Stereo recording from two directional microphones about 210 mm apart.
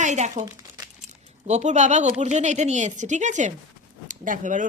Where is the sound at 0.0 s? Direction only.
35° right (ahead or behind).